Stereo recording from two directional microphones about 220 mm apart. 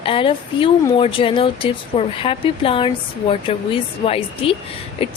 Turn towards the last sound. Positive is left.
turn(degrees=25)  # may be behind; listen again after turning